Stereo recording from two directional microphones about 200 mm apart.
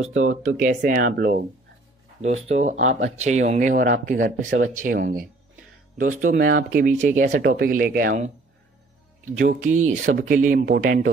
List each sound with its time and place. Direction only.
0.0 s speech: 85° right
0.6 s speech: 40° right (ahead or behind)
2.2 s speech: 35° right (ahead or behind)